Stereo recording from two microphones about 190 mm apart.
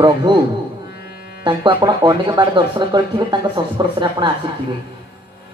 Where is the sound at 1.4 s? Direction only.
25° right (ahead or behind).